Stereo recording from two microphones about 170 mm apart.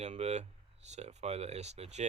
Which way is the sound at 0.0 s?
40° right (ahead or behind).